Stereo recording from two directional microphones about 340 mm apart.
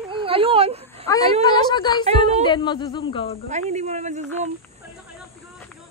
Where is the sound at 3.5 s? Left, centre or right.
Centre.